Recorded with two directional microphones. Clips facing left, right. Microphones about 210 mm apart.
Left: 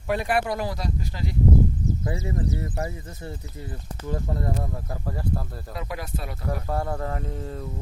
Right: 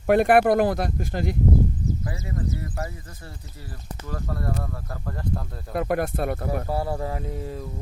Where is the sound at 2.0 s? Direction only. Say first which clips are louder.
Left 2 dB; 25° left (ahead or behind).